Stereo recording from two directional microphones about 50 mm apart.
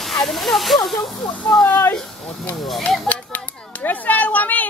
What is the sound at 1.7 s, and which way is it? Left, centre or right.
Speech, left.